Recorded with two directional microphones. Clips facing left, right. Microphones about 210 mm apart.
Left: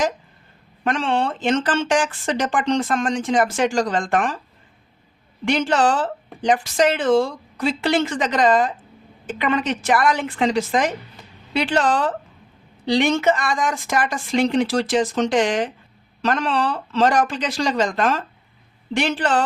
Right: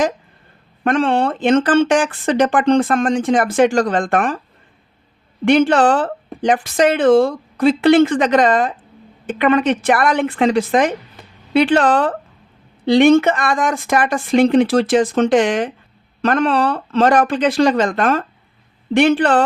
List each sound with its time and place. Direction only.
0.9 s speech: 55° right (ahead or behind)
5.5 s speech: 60° right (ahead or behind)
11.2 s a sound: 55° right (ahead or behind)
11.5 s speech: 60° right (ahead or behind)